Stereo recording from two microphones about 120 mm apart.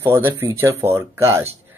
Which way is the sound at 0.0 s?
20° right (ahead or behind).